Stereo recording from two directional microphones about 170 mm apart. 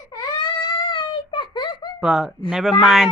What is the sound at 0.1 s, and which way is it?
Baby cry, 25° left (ahead or behind).